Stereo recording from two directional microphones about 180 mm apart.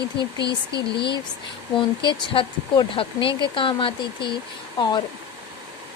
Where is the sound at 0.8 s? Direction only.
25° left (ahead or behind).